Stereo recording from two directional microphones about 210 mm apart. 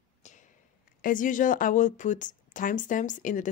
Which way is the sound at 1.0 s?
40° left (ahead or behind).